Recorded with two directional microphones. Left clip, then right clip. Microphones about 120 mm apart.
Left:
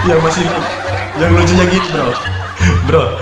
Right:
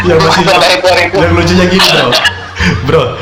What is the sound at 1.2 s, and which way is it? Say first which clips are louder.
A man's voice: right 3 dB; 25° right (ahead or behind).